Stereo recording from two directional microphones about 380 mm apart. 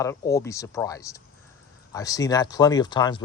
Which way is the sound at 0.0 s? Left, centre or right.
Centre.